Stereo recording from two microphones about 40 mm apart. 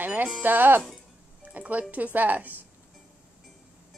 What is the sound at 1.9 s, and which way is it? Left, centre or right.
Speech, right.